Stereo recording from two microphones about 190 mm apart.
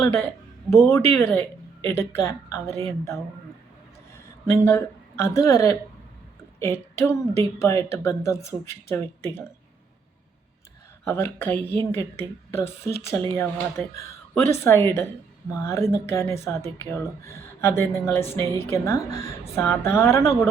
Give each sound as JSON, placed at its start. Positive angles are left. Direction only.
{"t": 0.9, "sound": "speech", "side_deg": 10}
{"t": 4.6, "sound": "speech", "side_deg": 15}
{"t": 11.0, "sound": "speech", "side_deg": 10}